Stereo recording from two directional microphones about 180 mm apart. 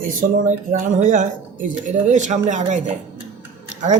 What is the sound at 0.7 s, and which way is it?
Speech, 45° right (ahead or behind).